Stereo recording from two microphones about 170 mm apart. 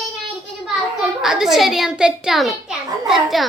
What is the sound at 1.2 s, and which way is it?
A child's voice, 5° right (ahead or behind).